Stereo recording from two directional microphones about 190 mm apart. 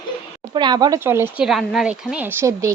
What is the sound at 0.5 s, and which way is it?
Speech, 20° right (ahead or behind).